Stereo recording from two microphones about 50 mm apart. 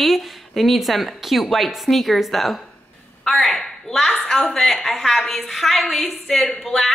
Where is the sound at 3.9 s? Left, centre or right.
Centre.